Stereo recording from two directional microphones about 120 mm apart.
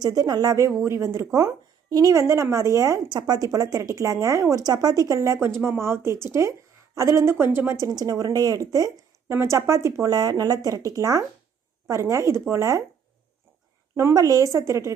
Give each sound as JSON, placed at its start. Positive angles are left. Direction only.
{"t": 0.0, "sound": "speech", "side_deg": -35}
{"t": 13.9, "sound": "speech", "side_deg": -25}